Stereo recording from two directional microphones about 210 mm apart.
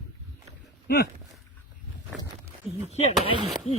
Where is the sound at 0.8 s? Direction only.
50° left (ahead or behind).